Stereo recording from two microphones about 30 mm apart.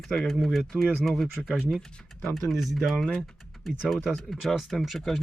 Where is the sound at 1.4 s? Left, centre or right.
Centre.